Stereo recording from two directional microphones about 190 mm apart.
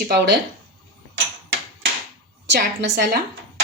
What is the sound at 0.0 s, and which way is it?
Speech, 60° right (ahead or behind).